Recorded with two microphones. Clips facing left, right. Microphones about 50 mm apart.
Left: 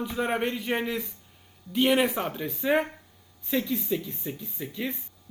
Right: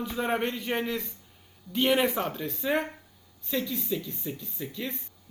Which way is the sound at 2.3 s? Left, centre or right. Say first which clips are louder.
Left 3 dB; centre.